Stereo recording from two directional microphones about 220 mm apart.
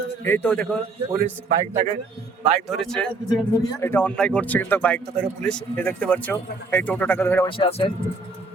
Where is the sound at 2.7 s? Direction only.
Centre (ahead or behind).